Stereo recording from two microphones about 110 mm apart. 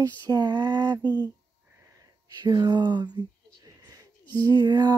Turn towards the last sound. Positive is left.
turn(degrees=-40)  # may be behind; listen again after turning